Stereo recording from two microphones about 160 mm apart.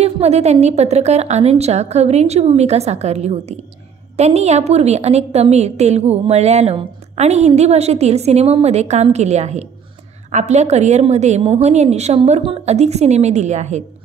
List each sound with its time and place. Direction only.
0.0 s a woman's voice: 40° right (ahead or behind)